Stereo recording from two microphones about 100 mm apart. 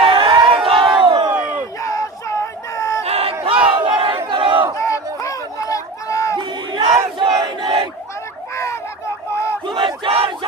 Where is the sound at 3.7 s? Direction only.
55° right (ahead or behind).